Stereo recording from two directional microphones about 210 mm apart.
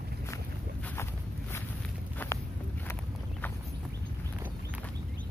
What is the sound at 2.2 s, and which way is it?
Walk, 10° left (ahead or behind).